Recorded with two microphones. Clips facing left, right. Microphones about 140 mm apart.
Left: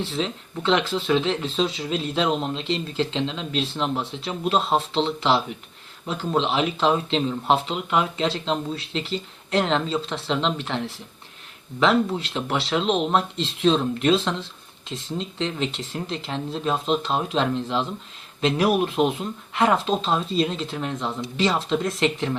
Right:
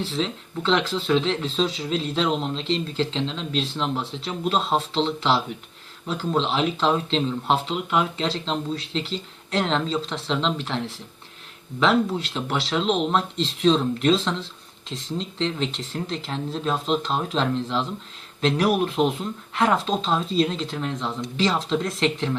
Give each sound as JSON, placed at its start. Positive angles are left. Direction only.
{"t": 0.2, "sound": "speech", "side_deg": 5}
{"t": 11.8, "sound": "speech", "side_deg": 0}